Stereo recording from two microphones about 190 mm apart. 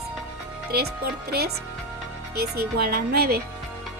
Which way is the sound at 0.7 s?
55° right (ahead or behind).